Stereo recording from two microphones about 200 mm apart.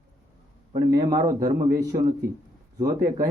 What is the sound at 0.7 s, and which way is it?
A man's voice, 20° right (ahead or behind).